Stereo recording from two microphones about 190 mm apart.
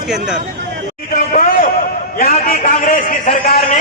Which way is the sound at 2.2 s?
45° left (ahead or behind).